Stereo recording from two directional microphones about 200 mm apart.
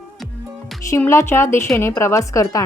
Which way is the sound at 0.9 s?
10° left (ahead or behind).